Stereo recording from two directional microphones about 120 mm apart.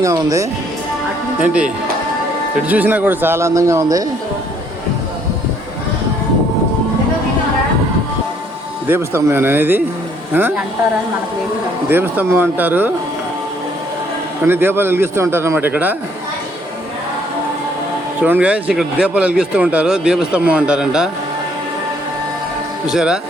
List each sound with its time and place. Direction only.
0.0 s a man's voice: 25° right (ahead or behind)
1.4 s speech: 10° right (ahead or behind); by 4.0 s 30° right (ahead or behind)
8.9 s speech: 20° right (ahead or behind)
11.9 s speech: 15° right (ahead or behind)
14.4 s a man's voice: 20° right (ahead or behind)
18.2 s speech: 10° right (ahead or behind)
22.9 s speech: 5° right (ahead or behind)